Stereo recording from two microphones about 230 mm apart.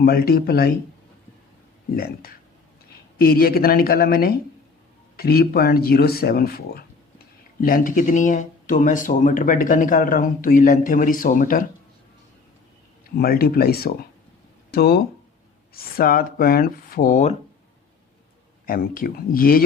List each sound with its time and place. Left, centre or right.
0.0 s speech: left
3.2 s speech: left
13.1 s speech: left
18.6 s speech: left